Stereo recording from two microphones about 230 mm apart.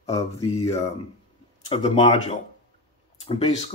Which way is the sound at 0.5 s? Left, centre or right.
Left.